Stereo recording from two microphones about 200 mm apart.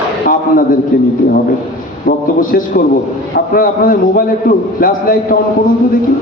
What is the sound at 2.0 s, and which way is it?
A man's voice, 45° left (ahead or behind).